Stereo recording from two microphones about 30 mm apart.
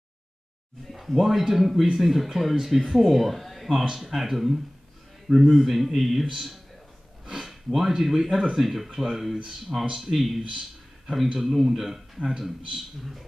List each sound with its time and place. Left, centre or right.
0.9 s a man's voice: centre
7.2 s a man's voice: centre
9.7 s speech: centre
10.1 s a man's voice: centre